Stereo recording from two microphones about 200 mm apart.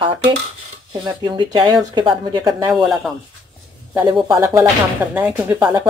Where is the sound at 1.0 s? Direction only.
20° right (ahead or behind).